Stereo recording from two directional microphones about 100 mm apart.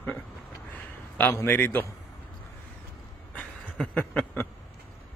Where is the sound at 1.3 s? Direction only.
25° left (ahead or behind).